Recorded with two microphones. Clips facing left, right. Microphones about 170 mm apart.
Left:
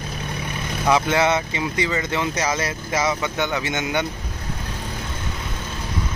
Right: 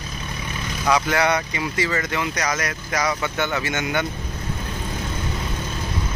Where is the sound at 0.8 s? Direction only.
25° left (ahead or behind).